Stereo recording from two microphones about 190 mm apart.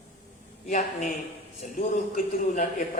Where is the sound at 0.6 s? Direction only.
40° left (ahead or behind).